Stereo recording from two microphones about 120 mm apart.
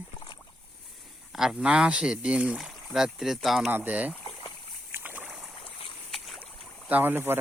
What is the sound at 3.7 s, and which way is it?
Speech, 15° right (ahead or behind).